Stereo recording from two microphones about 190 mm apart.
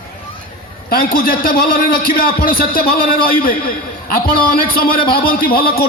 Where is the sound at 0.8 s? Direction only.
50° left (ahead or behind).